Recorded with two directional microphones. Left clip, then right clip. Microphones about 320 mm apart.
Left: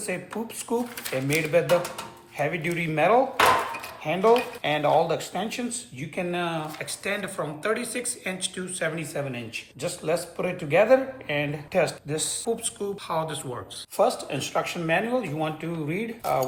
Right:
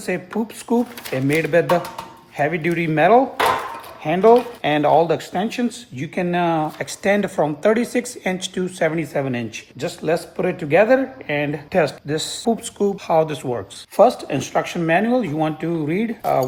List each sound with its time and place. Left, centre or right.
0.1 s speech: right
12.8 s speech: centre
14.0 s speech: right